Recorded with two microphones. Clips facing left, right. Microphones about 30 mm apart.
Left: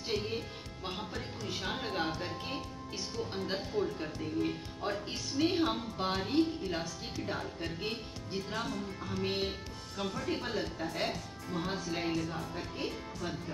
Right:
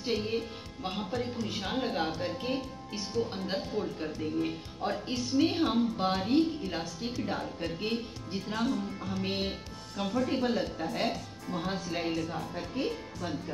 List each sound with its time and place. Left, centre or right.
0.1 s speech: right
1.1 s a woman's voice: centre
9.2 s speech: centre
9.9 s a woman's voice: centre
12.2 s a woman's voice: centre